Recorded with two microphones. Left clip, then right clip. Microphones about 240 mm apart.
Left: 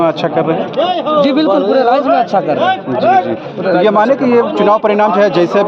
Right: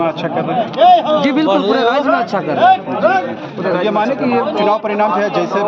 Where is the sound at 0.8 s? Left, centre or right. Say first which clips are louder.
Right 6 dB; right.